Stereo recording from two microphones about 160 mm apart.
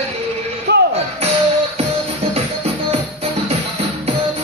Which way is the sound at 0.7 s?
90° right.